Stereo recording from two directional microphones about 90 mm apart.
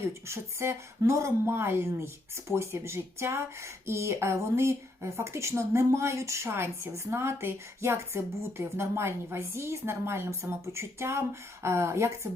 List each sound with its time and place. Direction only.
0.3 s speech: 30° right (ahead or behind)